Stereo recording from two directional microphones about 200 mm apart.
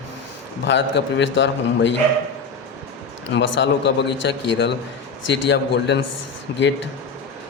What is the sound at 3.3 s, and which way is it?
Speech, 65° left (ahead or behind).